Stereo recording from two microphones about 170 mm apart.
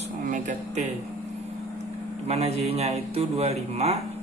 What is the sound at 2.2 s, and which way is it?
A man's voice, 40° right (ahead or behind).